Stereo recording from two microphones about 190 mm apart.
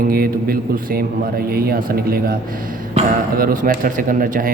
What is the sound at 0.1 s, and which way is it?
Speech, 50° right (ahead or behind).